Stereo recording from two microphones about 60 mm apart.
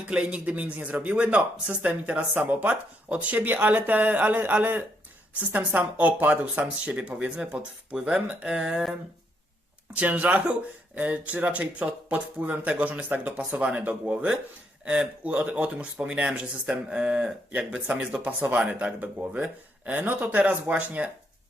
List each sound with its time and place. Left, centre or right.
0.1 s speech: right
9.9 s speech: right